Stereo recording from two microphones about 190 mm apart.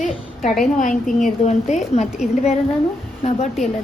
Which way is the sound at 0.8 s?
40° left (ahead or behind).